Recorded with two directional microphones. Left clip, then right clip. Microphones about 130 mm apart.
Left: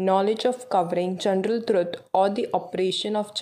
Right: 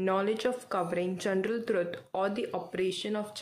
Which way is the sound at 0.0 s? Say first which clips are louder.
Left 8 dB; 30° left (ahead or behind).